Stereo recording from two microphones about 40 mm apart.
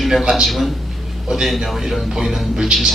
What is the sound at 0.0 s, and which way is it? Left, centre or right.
A man's voice, centre.